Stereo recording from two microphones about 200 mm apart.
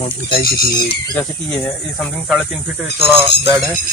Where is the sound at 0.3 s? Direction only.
50° left (ahead or behind).